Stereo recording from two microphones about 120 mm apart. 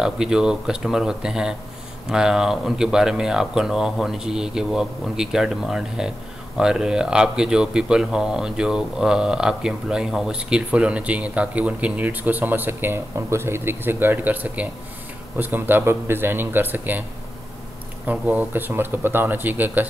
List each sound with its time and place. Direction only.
0.0 s speech: 5° right (ahead or behind)
18.0 s speech: 10° right (ahead or behind)